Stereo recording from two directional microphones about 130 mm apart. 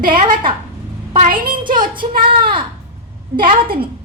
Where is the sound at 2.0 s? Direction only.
75° right (ahead or behind).